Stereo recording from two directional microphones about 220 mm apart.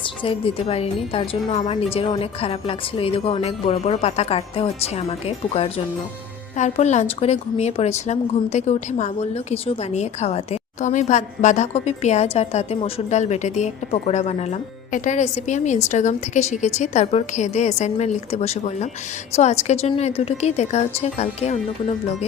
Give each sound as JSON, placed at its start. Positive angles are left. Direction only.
{"t": 0.2, "sound": "a woman's voice", "side_deg": 25}